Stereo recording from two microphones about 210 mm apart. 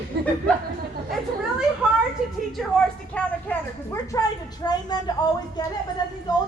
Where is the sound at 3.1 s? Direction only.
10° left (ahead or behind).